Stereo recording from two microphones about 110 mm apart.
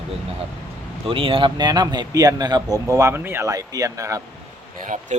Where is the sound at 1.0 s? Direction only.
55° right (ahead or behind); by 3.5 s 20° right (ahead or behind).